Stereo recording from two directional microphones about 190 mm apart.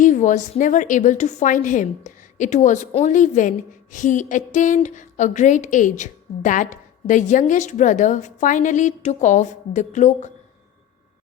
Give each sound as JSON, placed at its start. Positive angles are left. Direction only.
{"t": 0.0, "sound": "a woman's voice", "side_deg": 40}